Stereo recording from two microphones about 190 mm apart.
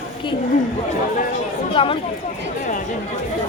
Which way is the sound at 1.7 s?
30° left (ahead or behind).